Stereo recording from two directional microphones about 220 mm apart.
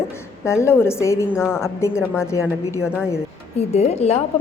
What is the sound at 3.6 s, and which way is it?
Speech, 30° left (ahead or behind).